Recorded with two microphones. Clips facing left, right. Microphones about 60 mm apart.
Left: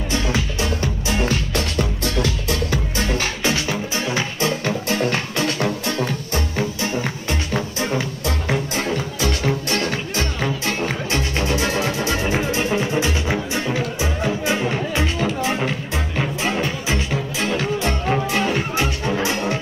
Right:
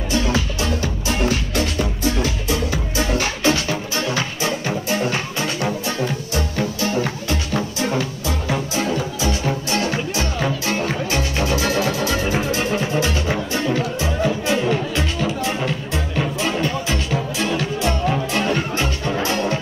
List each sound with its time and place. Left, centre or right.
3.4 s music: left
11.6 s music: centre
13.7 s music: centre
18.3 s music: centre